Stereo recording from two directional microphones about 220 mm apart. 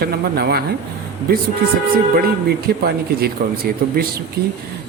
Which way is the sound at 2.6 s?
45° right (ahead or behind).